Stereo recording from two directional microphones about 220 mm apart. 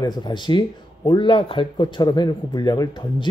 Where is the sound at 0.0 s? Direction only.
20° left (ahead or behind).